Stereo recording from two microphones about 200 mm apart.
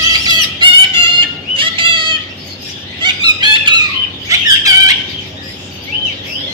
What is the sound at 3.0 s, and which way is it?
Squeak, 20° right (ahead or behind).